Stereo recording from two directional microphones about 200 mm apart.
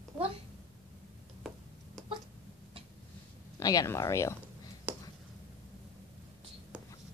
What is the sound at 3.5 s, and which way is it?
Speech, 15° left (ahead or behind).